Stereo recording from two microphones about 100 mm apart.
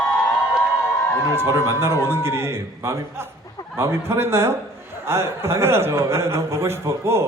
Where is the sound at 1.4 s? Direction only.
25° right (ahead or behind).